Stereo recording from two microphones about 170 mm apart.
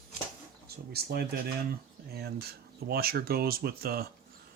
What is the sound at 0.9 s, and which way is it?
Speech, 65° right (ahead or behind).